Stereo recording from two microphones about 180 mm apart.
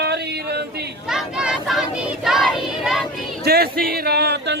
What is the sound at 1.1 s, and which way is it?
Child singing, 5° right (ahead or behind).